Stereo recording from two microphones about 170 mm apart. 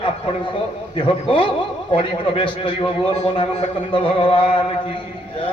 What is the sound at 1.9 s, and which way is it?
Speech, 30° left (ahead or behind).